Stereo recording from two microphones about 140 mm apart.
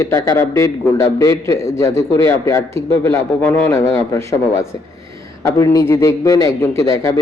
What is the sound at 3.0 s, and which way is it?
A man's voice, 15° left (ahead or behind).